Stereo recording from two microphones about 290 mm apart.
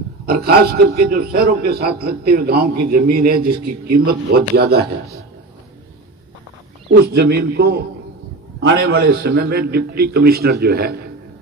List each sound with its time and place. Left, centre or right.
0.3 s a man's voice: right
3.5 s a man's voice: right
4.1 s a man's voice: right
6.9 s a man's voice: right